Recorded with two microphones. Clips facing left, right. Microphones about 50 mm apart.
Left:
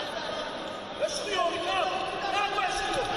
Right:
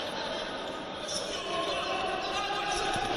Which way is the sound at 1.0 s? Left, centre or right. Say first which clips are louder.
Left 12 dB; left.